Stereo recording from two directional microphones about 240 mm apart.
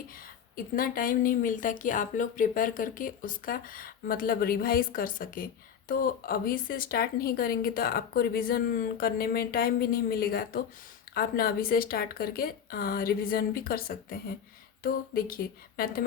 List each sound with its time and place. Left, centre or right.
0.5 s speech: left